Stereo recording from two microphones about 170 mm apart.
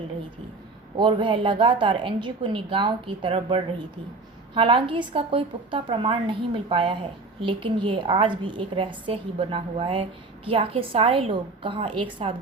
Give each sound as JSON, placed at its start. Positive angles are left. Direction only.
{"t": 0.9, "sound": "a woman's voice", "side_deg": -30}